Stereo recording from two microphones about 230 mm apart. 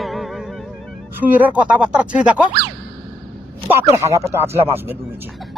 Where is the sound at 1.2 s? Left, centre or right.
Centre.